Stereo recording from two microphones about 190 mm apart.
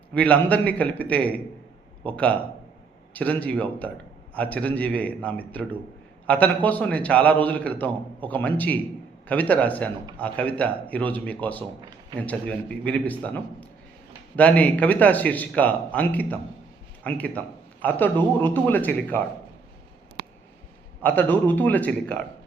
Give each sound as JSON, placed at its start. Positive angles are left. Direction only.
{"t": 0.1, "sound": "a man's voice", "side_deg": 5}
{"t": 21.0, "sound": "a man's voice", "side_deg": 10}